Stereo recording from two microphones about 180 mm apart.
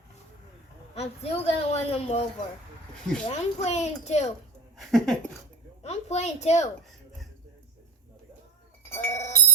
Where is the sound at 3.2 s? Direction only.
40° left (ahead or behind).